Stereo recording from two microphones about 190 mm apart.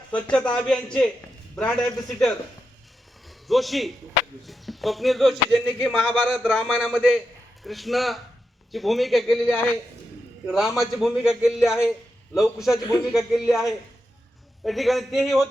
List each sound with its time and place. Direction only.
0.1 s a man's voice: 5° left (ahead or behind)
14.6 s speech: centre (ahead or behind)